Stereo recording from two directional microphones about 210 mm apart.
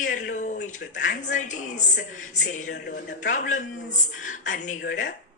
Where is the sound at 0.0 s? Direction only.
35° left (ahead or behind).